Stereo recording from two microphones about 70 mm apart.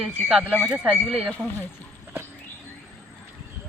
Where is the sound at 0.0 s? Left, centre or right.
Centre.